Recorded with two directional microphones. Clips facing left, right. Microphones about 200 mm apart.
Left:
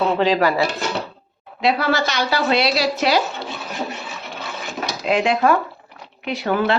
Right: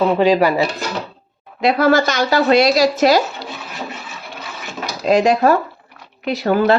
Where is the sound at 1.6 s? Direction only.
50° right (ahead or behind).